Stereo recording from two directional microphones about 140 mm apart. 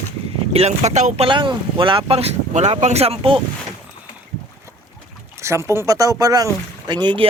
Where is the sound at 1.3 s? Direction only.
35° right (ahead or behind).